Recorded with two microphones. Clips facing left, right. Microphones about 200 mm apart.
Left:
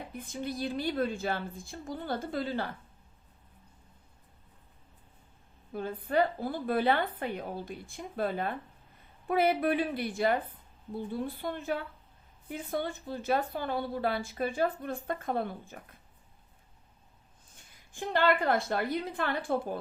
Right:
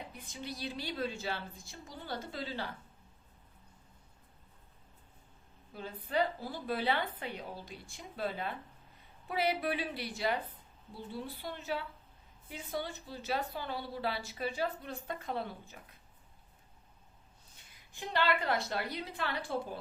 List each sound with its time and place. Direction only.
0.1 s a woman's voice: 50° left (ahead or behind)
5.7 s a woman's voice: 50° left (ahead or behind)
17.5 s a woman's voice: 50° left (ahead or behind)